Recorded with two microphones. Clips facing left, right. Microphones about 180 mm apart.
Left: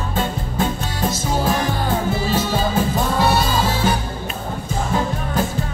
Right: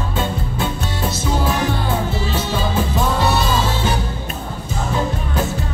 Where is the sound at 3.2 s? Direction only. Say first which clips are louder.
Even; 50° left (ahead or behind).